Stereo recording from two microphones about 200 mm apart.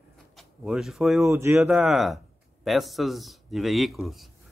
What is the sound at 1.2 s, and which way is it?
Cutlery, 10° right (ahead or behind).